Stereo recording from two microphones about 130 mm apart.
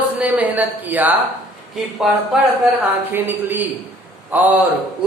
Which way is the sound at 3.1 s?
15° right (ahead or behind).